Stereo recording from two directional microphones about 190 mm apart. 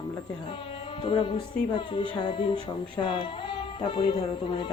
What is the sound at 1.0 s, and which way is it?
Speech, 25° left (ahead or behind).